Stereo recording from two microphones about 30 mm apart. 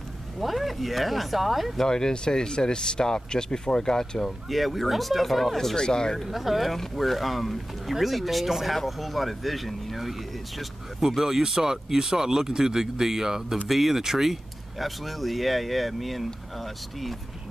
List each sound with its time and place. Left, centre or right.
0.4 s speech: centre
1.9 s speech: left
4.5 s speech: centre
5.8 s speech: left
6.2 s speech: centre
11.0 s speech: centre